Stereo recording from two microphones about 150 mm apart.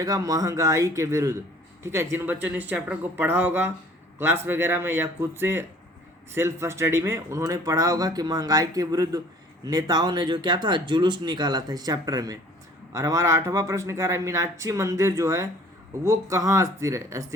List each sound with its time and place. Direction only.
0.0 s speech: 25° right (ahead or behind)